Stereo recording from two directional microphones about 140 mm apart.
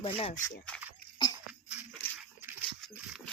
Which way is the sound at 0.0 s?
40° left (ahead or behind).